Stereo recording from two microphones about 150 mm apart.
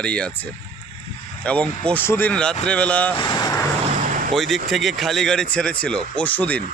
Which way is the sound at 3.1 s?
30° left (ahead or behind).